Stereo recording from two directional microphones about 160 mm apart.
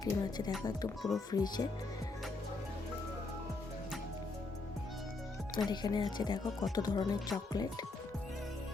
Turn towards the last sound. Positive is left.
turn(degrees=25)  # may be behind; listen again after turning